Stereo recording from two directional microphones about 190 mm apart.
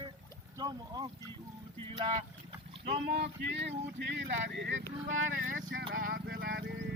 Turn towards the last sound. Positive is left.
turn(degrees=-55)  # may be behind; listen again after turning